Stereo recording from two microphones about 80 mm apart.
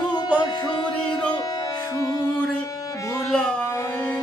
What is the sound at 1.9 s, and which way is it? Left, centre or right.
Music, left.